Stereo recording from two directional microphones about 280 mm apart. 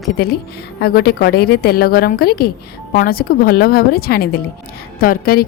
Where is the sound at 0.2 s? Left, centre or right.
Left.